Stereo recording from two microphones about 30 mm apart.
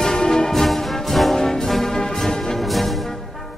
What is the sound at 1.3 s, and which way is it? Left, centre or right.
Brass instrument, centre.